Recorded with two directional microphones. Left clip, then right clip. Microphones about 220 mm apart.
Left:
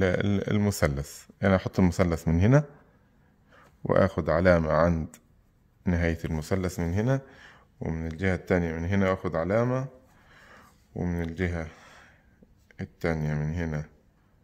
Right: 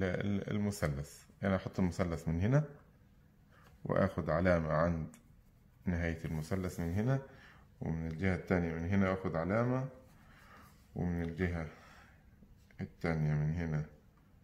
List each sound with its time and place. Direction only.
0.0 s speech: 50° left (ahead or behind)
10.3 s a sound: 50° left (ahead or behind)
12.6 s speech: 45° left (ahead or behind)